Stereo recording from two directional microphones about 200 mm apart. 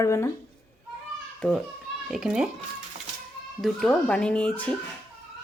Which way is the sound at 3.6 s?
5° left (ahead or behind).